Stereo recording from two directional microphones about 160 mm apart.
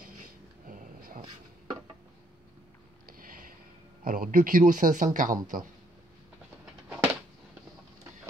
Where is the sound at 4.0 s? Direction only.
60° right (ahead or behind).